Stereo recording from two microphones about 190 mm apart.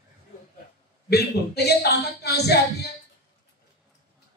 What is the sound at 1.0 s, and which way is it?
A man's voice, 55° left (ahead or behind).